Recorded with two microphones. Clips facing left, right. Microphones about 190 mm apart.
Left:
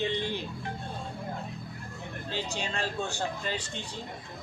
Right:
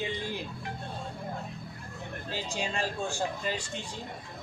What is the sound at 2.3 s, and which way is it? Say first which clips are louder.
Speech: even; 10° right (ahead or behind).